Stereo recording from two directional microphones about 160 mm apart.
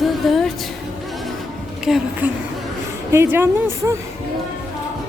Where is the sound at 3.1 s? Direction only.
15° right (ahead or behind).